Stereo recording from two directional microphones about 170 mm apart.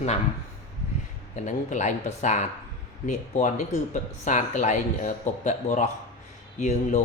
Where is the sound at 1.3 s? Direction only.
45° left (ahead or behind).